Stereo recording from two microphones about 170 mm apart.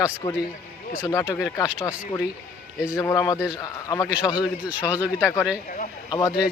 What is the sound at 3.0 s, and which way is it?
Speech, 20° left (ahead or behind).